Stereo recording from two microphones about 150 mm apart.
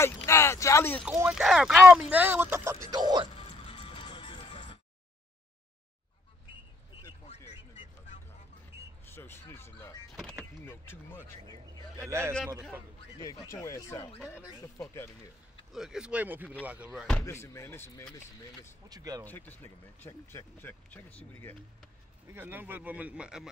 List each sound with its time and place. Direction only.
0.0 s a sound: 20° left (ahead or behind)
1.3 s speech: centre (ahead or behind); by 3.3 s 25° right (ahead or behind)
3.3 s music: 35° left (ahead or behind)
9.0 s music: 15° left (ahead or behind)
10.6 s speech: 15° left (ahead or behind)
12.0 s speech: 20° right (ahead or behind)
13.2 s speech: 20° left (ahead or behind)
15.7 s speech: 5° right (ahead or behind)
17.2 s speech: 20° left (ahead or behind)
18.9 s speech: 25° right (ahead or behind)
19.2 s speech: 10° left (ahead or behind)
22.3 s speech: 15° right (ahead or behind)